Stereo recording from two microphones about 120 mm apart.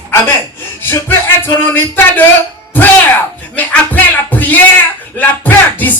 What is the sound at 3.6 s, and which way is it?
Music, 15° left (ahead or behind).